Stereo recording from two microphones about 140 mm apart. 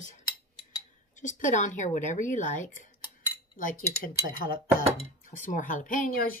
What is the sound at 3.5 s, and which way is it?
Speech, 80° left.